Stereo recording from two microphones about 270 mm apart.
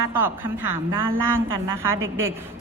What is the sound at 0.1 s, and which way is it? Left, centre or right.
A woman's voice, centre.